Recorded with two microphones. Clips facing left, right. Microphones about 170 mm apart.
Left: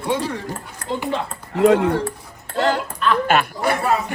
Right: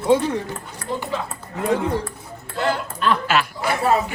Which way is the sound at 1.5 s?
70° left (ahead or behind).